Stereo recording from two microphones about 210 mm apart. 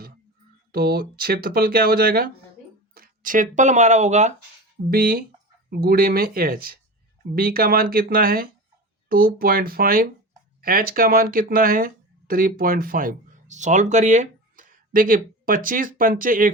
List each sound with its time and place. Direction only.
0.7 s speech: 45° right (ahead or behind)
4.9 s speech: 45° right (ahead or behind)